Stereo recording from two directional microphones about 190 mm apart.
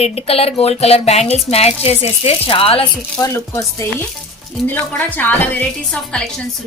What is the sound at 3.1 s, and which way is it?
A woman's voice, 15° left (ahead or behind).